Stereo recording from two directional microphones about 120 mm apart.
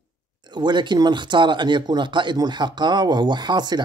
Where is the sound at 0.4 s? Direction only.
40° right (ahead or behind).